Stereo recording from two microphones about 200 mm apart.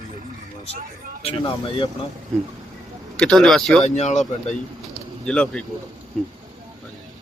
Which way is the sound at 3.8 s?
35° left (ahead or behind).